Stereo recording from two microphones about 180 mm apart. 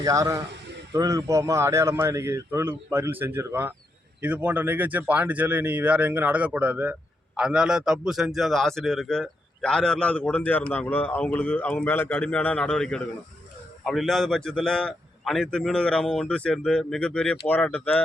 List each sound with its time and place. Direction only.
0.0 s a man's voice: 20° right (ahead or behind); by 18.0 s 5° left (ahead or behind)